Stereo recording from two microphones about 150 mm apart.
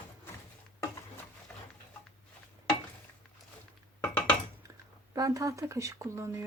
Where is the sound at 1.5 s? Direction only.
10° left (ahead or behind).